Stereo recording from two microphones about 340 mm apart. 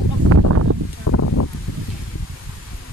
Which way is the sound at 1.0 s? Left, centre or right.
Left.